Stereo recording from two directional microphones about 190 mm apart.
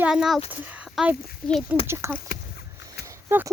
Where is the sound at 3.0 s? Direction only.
15° right (ahead or behind).